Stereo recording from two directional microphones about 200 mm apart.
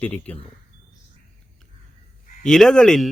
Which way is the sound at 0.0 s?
10° left (ahead or behind).